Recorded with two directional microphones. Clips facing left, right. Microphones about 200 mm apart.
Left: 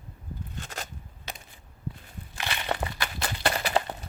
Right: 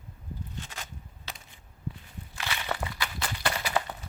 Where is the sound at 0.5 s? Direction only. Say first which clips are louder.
Left 3 dB; 45° left (ahead or behind).